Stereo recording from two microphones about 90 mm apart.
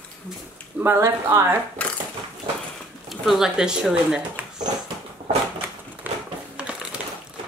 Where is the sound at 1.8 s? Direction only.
15° left (ahead or behind).